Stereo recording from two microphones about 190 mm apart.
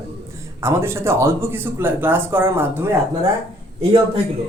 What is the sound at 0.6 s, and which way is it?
Speech, 15° right (ahead or behind).